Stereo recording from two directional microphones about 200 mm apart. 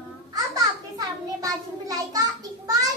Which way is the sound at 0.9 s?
20° right (ahead or behind).